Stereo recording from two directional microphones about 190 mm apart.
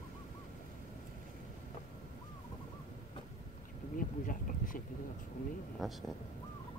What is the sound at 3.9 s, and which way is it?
Bee, 45° left (ahead or behind).